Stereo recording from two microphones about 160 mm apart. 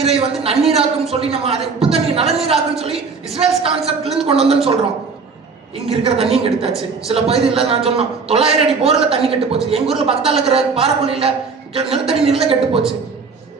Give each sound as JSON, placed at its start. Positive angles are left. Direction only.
{"t": 0.0, "sound": "a man's voice", "side_deg": -40}
{"t": 5.7, "sound": "a man's voice", "side_deg": -40}